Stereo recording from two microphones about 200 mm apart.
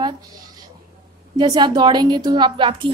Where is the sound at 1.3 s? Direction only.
20° right (ahead or behind).